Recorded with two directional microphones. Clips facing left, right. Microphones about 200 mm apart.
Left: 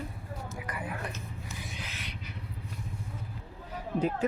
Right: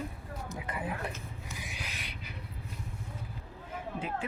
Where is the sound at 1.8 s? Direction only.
15° right (ahead or behind).